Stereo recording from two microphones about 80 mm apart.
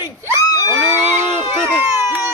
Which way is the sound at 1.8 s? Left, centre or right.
Right.